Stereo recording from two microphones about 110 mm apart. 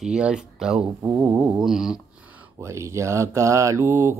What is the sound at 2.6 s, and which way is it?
Mantra, 25° right (ahead or behind).